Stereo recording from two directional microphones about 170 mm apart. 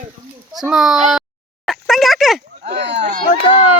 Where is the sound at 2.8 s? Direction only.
90° right.